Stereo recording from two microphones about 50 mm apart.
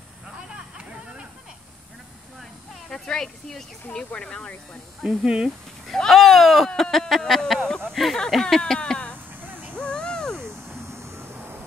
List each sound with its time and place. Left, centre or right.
2.9 s speech: centre
5.0 s speech: centre
5.9 s speech: centre
6.8 s a sound: centre
8.4 s speech: centre
8.7 s speech: left
9.5 s a sound: right
9.8 s a sound: left
10.4 s vehicle: right